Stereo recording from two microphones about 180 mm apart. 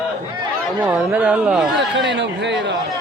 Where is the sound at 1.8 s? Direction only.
75° right (ahead or behind).